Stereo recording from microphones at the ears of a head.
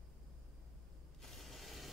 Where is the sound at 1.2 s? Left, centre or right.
Centre.